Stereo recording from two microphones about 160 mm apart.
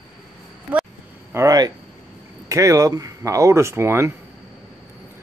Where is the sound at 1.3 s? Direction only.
20° right (ahead or behind).